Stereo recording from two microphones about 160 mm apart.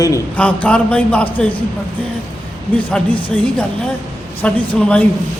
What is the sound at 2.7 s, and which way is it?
A man's voice, 10° left (ahead or behind).